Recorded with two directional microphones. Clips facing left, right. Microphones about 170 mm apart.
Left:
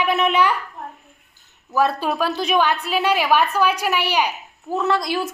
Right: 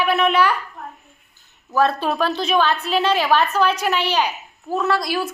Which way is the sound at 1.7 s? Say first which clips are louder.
Right 1 dB; 10° left (ahead or behind).